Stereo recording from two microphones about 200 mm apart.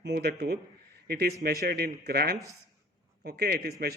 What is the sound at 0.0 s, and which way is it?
A man's voice, 55° right (ahead or behind).